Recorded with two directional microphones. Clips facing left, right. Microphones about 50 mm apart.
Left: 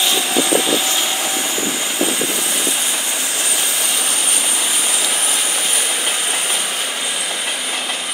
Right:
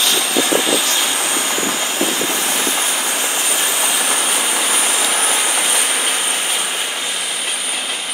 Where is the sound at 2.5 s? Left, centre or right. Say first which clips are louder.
Right 2 dB; right.